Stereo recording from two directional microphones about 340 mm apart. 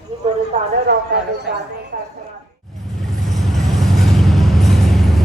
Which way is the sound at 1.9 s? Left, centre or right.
Right.